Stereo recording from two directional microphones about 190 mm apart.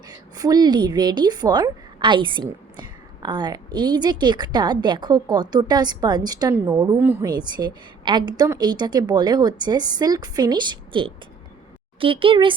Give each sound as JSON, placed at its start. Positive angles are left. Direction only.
{"t": 0.1, "sound": "a woman's voice", "side_deg": -20}